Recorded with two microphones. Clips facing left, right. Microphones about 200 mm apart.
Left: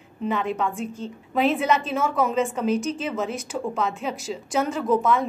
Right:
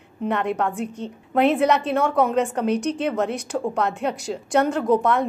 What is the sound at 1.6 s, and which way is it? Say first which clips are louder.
Speech: right 3 dB; 65° right (ahead or behind).